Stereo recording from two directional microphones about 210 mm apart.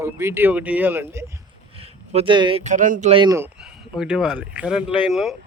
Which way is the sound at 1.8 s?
25° right (ahead or behind).